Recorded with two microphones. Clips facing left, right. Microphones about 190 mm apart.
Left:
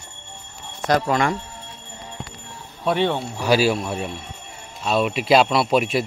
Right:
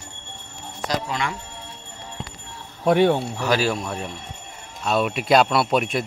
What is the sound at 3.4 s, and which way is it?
Speech, 10° left (ahead or behind).